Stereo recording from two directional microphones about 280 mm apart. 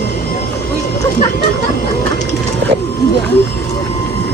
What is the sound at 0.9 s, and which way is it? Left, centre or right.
Music, left.